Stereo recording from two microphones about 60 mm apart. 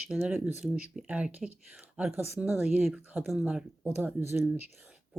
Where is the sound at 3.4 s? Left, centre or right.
Centre.